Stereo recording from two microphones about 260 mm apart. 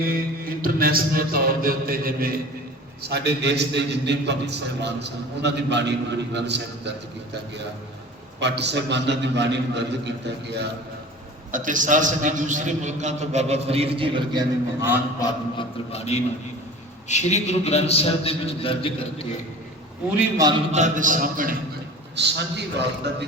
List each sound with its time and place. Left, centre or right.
0.0 s a man's voice: right
8.4 s a man's voice: right
11.5 s a man's voice: right; by 15.0 s centre
15.2 s a man's voice: left
20.1 s a man's voice: centre
20.7 s a man's voice: right
22.1 s a man's voice: right